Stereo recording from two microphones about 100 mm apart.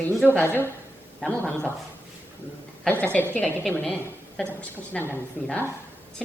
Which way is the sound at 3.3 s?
15° left (ahead or behind).